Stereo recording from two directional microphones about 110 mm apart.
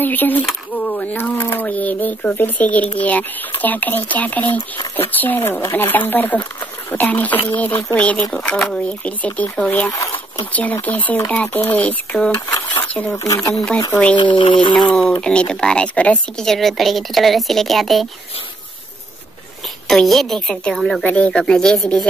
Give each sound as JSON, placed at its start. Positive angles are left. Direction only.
{"t": 0.0, "sound": "speech", "side_deg": 15}
{"t": 12.4, "sound": "speech", "side_deg": 20}
{"t": 13.7, "sound": "speech", "side_deg": 30}
{"t": 14.1, "sound": "speech", "side_deg": 45}
{"t": 14.9, "sound": "a woman's voice", "side_deg": 10}
{"t": 19.9, "sound": "a woman's voice", "side_deg": 5}
{"t": 21.0, "sound": "speech", "side_deg": 10}